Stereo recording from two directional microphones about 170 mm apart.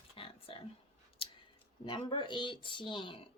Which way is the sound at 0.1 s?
30° left (ahead or behind).